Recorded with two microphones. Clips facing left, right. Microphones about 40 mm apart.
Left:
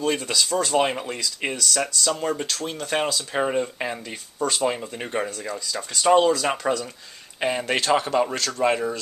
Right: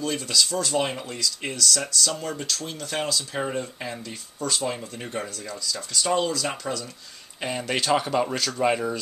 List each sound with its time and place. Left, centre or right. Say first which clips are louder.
0.0 s speech: left 2 dB; left; by 9.0 s centre